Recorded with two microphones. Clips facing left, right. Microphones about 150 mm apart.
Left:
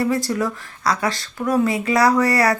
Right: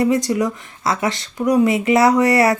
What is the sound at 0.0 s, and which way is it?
Speech, 20° right (ahead or behind).